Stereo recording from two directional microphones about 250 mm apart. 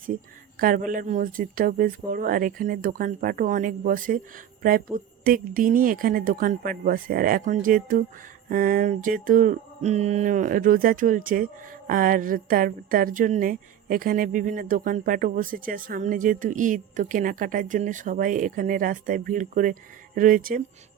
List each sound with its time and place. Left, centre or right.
0.6 s a woman's voice: right